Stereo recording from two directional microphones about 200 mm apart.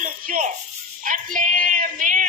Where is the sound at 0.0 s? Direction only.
40° right (ahead or behind).